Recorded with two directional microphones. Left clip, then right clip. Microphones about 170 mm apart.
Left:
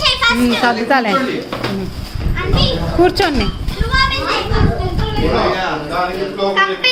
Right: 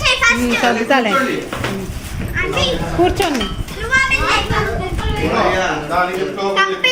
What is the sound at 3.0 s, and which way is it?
Speech, 20° left (ahead or behind).